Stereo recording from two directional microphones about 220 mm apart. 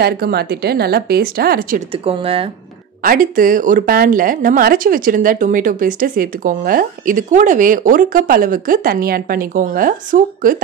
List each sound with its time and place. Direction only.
0.0 s speech: 45° right (ahead or behind)
1.9 s speech: 25° right (ahead or behind)
3.0 s a woman's voice: 40° right (ahead or behind)